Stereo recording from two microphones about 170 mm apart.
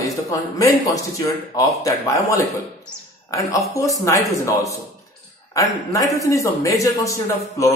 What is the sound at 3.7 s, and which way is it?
Speech, 20° left (ahead or behind).